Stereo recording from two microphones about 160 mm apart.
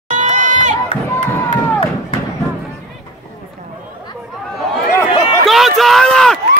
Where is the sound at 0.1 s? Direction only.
50° right (ahead or behind).